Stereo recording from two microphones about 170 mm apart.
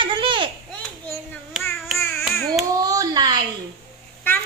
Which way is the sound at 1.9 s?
15° left (ahead or behind).